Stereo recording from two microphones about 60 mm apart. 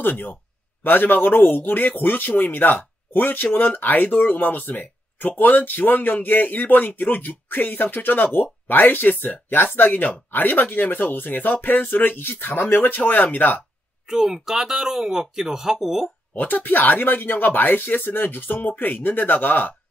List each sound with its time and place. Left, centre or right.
0.0 s speech: left
14.0 s speech: centre
16.3 s speech: left